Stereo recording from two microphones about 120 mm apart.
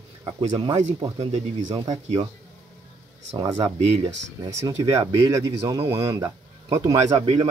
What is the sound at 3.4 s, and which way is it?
Speech, 30° right (ahead or behind).